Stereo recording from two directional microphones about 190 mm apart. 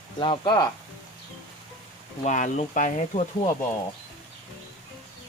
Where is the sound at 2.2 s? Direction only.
40° left (ahead or behind).